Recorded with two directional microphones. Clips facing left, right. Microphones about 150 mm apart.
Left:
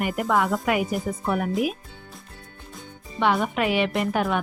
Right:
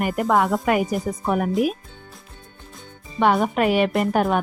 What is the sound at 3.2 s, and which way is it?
Speech, 45° right (ahead or behind).